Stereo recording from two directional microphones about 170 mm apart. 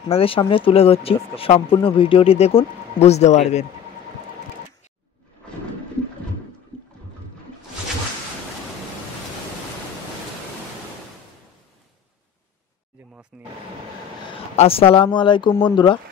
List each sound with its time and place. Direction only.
0.1 s speech: 35° left (ahead or behind)
6.7 s boat: 5° left (ahead or behind)
13.3 s a sound: 5° right (ahead or behind)
14.6 s speech: 35° left (ahead or behind)